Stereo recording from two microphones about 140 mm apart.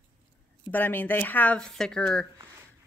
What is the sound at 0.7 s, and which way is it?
Speech, 15° left (ahead or behind).